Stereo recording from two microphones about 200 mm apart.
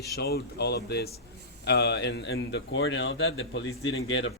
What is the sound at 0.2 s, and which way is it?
A man's voice, 50° left (ahead or behind).